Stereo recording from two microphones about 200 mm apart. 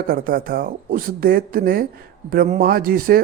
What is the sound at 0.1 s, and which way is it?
Speech, 45° right (ahead or behind).